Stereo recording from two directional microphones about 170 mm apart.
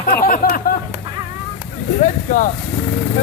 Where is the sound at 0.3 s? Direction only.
60° left (ahead or behind).